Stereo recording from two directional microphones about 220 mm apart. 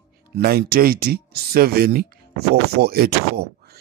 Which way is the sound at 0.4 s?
45° right (ahead or behind).